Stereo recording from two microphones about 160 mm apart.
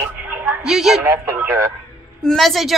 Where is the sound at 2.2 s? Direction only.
Centre (ahead or behind).